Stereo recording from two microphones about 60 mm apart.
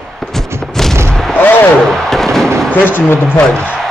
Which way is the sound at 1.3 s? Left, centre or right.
Left.